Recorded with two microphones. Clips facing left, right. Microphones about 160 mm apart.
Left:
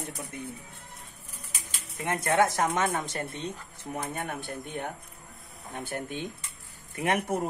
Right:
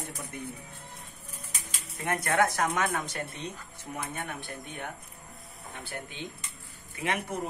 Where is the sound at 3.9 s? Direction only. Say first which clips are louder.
Left 3 dB; 40° left (ahead or behind).